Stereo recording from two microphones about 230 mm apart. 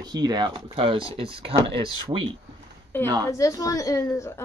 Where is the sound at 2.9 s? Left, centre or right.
Centre.